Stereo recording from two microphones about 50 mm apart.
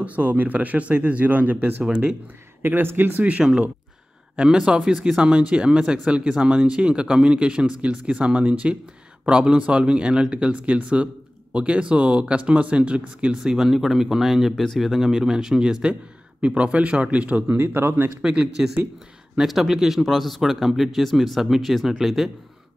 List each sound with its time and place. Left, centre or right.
0.0 s speech: right
2.6 s speech: right
4.4 s speech: centre
13.4 s speech: centre
14.5 s speech: centre
14.8 s speech: centre; by 17.6 s right
17.6 s speech: right
18.2 s speech: centre
19.3 s speech: centre